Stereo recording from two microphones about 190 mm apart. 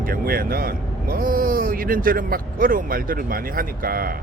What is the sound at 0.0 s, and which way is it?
Speech, 50° right (ahead or behind).